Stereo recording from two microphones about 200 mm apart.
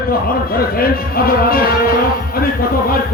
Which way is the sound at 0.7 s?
50° left (ahead or behind).